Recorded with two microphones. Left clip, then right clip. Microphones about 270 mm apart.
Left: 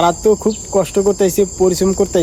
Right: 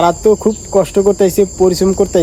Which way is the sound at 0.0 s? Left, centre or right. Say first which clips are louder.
Right 2 dB; centre.